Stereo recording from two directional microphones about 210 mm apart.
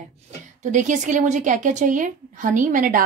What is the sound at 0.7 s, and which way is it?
A woman's voice, 35° right (ahead or behind).